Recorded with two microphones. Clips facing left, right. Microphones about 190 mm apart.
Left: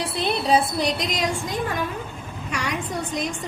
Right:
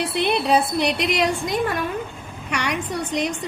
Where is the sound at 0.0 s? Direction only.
65° right (ahead or behind).